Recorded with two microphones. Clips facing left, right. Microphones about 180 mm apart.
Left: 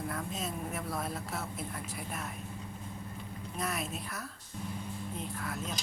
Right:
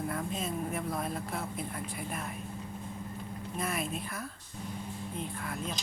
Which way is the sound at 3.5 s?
Centre (ahead or behind).